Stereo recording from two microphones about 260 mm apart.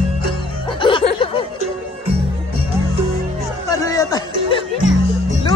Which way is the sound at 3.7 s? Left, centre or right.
Centre.